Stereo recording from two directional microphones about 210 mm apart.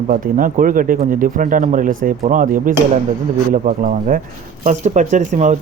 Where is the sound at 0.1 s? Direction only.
40° right (ahead or behind).